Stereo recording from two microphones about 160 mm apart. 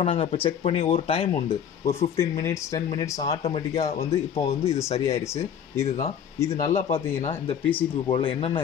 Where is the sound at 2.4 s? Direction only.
20° left (ahead or behind).